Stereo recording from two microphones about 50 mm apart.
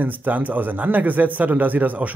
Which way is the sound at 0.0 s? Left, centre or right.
Right.